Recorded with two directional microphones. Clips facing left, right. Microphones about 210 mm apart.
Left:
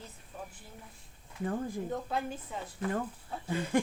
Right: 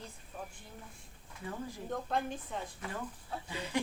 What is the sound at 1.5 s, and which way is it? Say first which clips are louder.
Speech: left 7 dB; 50° left (ahead or behind).